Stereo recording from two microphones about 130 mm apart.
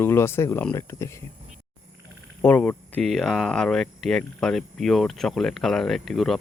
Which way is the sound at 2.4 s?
15° left (ahead or behind).